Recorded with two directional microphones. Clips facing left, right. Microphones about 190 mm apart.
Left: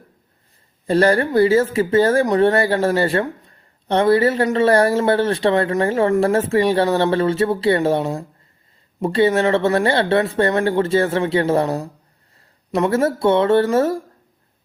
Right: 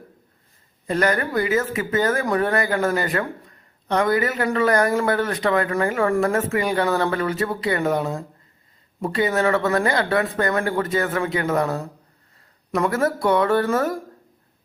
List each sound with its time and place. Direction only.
0.9 s speech: 30° left (ahead or behind)